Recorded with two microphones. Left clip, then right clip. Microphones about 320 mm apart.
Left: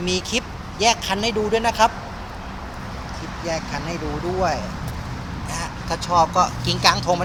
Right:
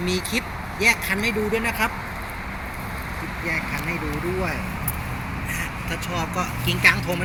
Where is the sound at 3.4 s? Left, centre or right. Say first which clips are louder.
Even; left.